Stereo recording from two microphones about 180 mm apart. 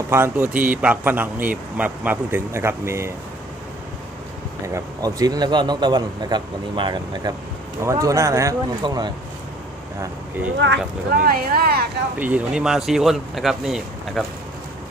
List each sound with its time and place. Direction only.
0.1 s speech: 15° right (ahead or behind)
4.6 s a man's voice: 20° right (ahead or behind)
10.0 s speech: 10° right (ahead or behind)
10.6 s speech: 75° right (ahead or behind)
11.2 s speech: 55° right (ahead or behind)
12.2 s speech: 5° right (ahead or behind)